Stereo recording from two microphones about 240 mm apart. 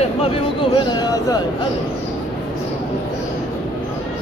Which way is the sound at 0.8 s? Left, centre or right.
Centre.